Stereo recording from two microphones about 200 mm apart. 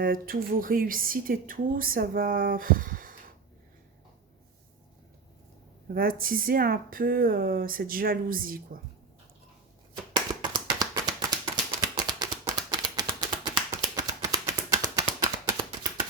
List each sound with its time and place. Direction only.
0.0 s speech: 45° right (ahead or behind)
5.9 s speech: 45° right (ahead or behind)
10.1 s a sound: 20° right (ahead or behind)